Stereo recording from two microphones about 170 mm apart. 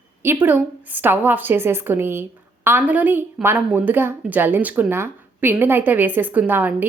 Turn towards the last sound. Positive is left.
turn(degrees=-10)  # may be behind; listen again after turning